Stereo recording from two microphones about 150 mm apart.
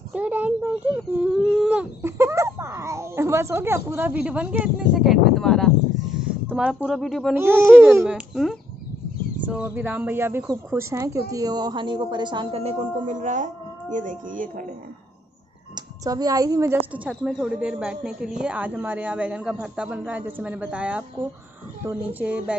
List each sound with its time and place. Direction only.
0.1 s speech: 10° right (ahead or behind)
1.4 s speech: 5° left (ahead or behind)
1.7 s speech: 15° right (ahead or behind); by 7.3 s centre (ahead or behind)
7.3 s speech: 15° right (ahead or behind)
8.1 s speech: centre (ahead or behind); by 14.5 s 60° right (ahead or behind)
15.7 s a woman's voice: 25° right (ahead or behind)
16.9 s speech: 5° right (ahead or behind)
22.2 s speech: 10° right (ahead or behind)